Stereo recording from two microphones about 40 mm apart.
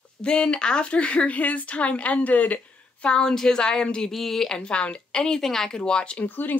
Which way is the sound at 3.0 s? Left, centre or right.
Left.